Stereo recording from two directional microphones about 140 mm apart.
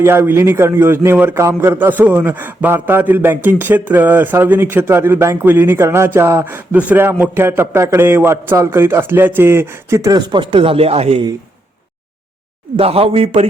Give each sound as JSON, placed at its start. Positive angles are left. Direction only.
{"t": 0.0, "sound": "a man's voice", "side_deg": -15}
{"t": 12.7, "sound": "a man's voice", "side_deg": -45}